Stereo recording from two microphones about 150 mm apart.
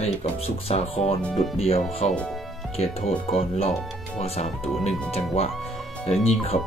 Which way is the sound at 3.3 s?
40° left (ahead or behind).